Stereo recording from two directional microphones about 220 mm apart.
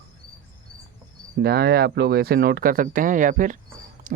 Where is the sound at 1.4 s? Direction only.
45° right (ahead or behind).